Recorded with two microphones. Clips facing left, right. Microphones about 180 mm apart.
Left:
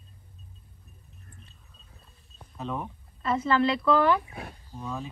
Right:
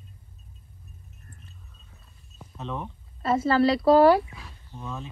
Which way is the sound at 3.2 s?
40° right (ahead or behind).